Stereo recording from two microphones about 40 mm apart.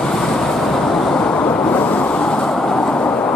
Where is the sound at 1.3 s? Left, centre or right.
Left.